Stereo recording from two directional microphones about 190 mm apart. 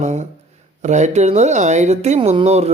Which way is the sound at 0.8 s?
40° right (ahead or behind).